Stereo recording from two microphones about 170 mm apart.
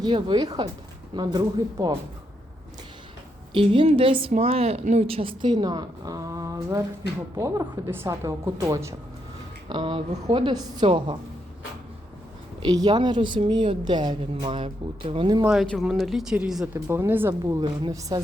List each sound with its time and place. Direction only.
0.0 s a woman's voice: 25° right (ahead or behind)
3.5 s a woman's voice: 30° right (ahead or behind)
9.6 s a woman's voice: 30° right (ahead or behind)
12.6 s a woman's voice: 25° right (ahead or behind)
15.4 s a woman's voice: centre (ahead or behind); by 18.2 s 25° right (ahead or behind)